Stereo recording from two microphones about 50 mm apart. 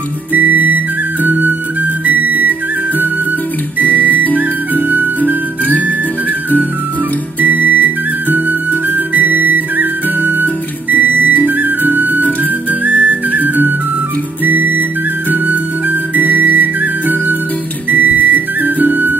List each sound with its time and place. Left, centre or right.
0.3 s flute: right
3.8 s music: right
7.3 s music: right
12.8 s whistle: right
14.4 s music: right